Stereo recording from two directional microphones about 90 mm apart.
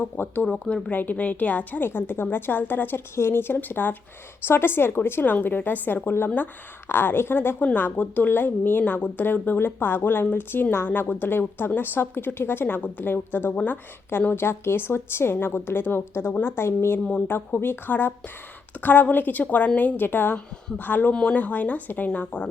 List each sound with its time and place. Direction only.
0.0 s a woman's voice: 20° left (ahead or behind)
0.4 s a woman's voice: 10° left (ahead or behind)